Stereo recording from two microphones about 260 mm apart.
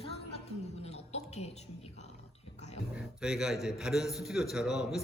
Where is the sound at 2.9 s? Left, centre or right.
Centre.